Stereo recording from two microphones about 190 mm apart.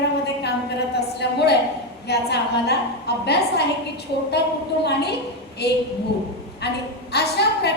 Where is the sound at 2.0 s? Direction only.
60° left (ahead or behind).